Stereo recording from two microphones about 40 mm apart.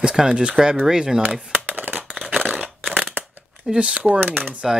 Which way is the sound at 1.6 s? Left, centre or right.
Right.